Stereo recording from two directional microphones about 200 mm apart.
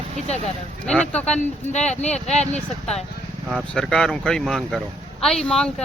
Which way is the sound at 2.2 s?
35° left (ahead or behind).